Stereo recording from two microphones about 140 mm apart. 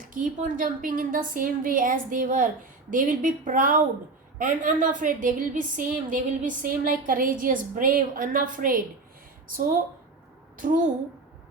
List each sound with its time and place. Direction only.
0.1 s a woman's voice: 70° right (ahead or behind)
10.6 s a woman's voice: 75° right (ahead or behind)